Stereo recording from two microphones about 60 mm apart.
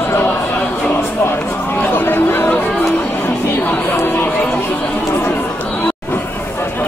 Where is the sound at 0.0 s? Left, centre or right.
Left.